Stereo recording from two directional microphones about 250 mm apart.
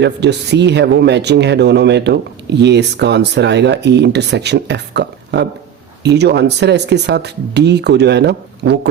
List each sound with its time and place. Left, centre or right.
0.0 s speech: right